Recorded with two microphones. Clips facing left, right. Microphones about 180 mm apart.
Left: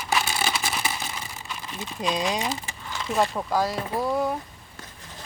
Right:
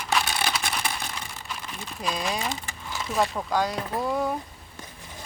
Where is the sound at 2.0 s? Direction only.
20° left (ahead or behind).